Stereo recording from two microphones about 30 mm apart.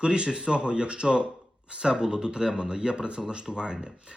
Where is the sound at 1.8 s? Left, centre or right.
Right.